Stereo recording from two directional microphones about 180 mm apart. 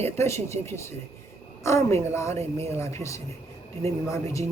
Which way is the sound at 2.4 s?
35° right (ahead or behind).